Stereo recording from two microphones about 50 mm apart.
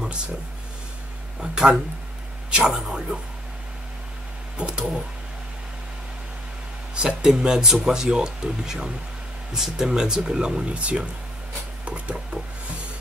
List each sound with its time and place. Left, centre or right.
1.4 s speech: centre
4.6 s speech: centre
7.0 s speech: centre
11.8 s a sound: right